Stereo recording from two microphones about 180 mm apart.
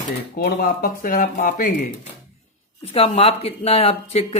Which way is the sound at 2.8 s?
35° left (ahead or behind).